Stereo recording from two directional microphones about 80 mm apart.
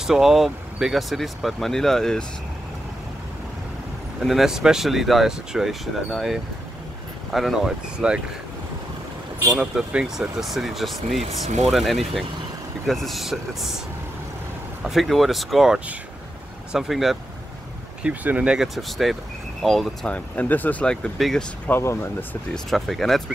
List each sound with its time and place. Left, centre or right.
0.0 s speech: centre
4.2 s speech: centre
9.4 s speech: centre
14.8 s speech: centre
18.0 s speech: centre
18.8 s speech: centre
20.1 s speech: left
21.2 s speech: centre
21.6 s speech: left
22.5 s speech: centre